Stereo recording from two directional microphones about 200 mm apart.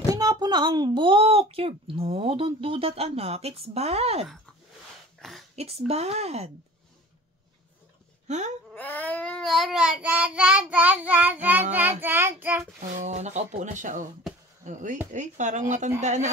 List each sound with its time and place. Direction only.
0.1 s a woman's voice: 20° right (ahead or behind)
5.6 s speech: 30° right (ahead or behind)
8.3 s speech: 35° right (ahead or behind)
8.7 s child singing: 10° left (ahead or behind); by 12.6 s 10° right (ahead or behind)
12.8 s speech: 35° right (ahead or behind)